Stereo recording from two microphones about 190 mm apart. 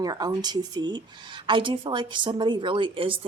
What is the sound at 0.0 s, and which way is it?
Speech, 20° right (ahead or behind).